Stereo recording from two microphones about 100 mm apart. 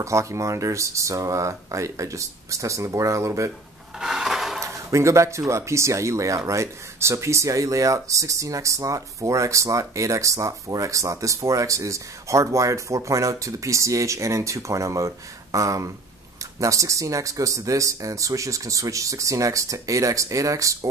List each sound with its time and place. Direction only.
0.0 s speech: 30° right (ahead or behind)
4.0 s rub: 5° right (ahead or behind)
4.6 s speech: 30° right (ahead or behind)